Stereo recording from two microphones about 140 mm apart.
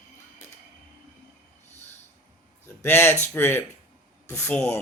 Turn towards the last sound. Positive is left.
turn(degrees=20)  # may be behind; listen again after turning